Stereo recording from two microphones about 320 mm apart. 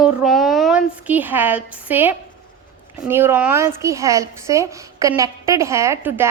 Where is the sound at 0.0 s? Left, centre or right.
Centre.